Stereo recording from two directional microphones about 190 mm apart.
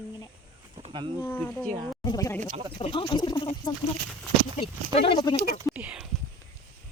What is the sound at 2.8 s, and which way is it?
Speech, 30° left (ahead or behind).